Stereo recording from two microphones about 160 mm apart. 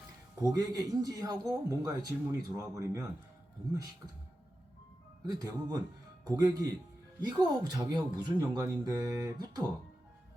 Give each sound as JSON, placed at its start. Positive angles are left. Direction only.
{"t": 0.4, "sound": "speech", "side_deg": -25}
{"t": 5.2, "sound": "speech", "side_deg": -25}